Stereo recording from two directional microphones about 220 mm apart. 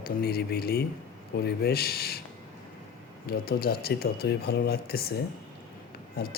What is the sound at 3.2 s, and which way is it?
Speech, 45° left (ahead or behind).